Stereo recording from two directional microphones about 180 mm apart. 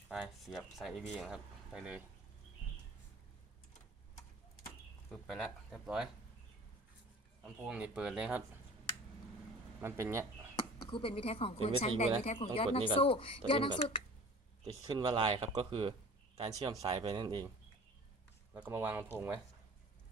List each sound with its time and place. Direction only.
0.1 s speech: centre (ahead or behind)
5.1 s speech: centre (ahead or behind)
7.4 s speech: 5° right (ahead or behind)
9.8 s speech: 15° right (ahead or behind)
10.9 s speech: 30° left (ahead or behind)
14.6 s speech: 25° right (ahead or behind)
18.5 s speech: 10° right (ahead or behind)